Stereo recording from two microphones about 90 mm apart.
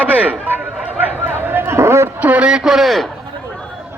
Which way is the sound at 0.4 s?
20° right (ahead or behind).